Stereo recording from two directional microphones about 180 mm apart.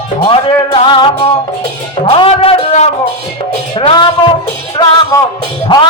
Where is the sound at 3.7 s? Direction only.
25° left (ahead or behind).